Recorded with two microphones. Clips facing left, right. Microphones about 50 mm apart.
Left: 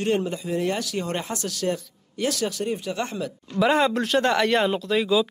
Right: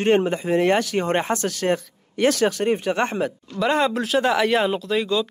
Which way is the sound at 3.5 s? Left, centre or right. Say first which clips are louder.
Left 1 dB; centre.